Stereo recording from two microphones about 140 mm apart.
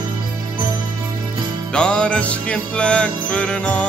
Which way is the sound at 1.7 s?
5° left (ahead or behind).